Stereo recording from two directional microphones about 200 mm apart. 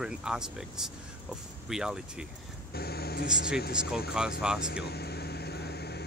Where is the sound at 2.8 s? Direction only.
50° left (ahead or behind).